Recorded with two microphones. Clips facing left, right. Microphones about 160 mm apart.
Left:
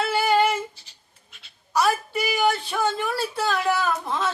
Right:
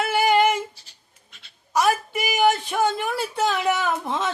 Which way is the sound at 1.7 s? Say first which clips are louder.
Right 1 dB; 15° right (ahead or behind).